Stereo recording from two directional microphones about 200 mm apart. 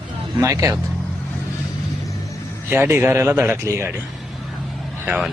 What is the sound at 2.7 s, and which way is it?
Speech, 10° right (ahead or behind).